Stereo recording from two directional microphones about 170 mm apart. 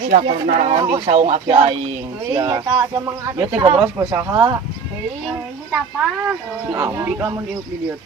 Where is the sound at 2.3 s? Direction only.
25° right (ahead or behind).